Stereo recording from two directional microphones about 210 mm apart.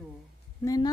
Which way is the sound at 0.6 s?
15° left (ahead or behind).